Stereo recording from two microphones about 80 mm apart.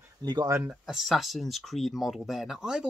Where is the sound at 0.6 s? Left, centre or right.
Centre.